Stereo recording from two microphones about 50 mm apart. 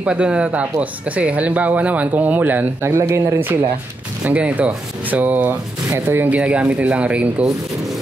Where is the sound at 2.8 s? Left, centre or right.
Right.